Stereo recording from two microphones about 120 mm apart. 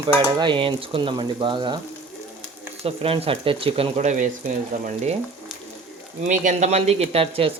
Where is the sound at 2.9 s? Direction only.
55° right (ahead or behind).